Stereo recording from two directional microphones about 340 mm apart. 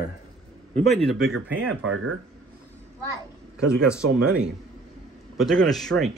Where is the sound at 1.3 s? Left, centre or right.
Right.